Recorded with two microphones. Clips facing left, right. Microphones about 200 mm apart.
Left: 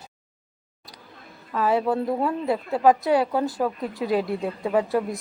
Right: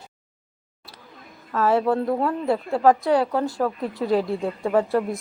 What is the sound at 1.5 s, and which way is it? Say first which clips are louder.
Speech: right 2 dB; centre (ahead or behind).